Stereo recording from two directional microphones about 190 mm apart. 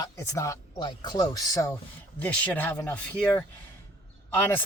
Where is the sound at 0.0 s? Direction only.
15° left (ahead or behind).